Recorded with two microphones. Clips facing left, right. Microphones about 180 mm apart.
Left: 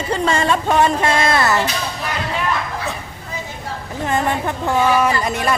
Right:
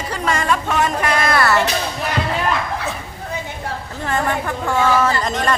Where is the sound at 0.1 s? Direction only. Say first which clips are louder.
Left 3 dB; 30° left (ahead or behind).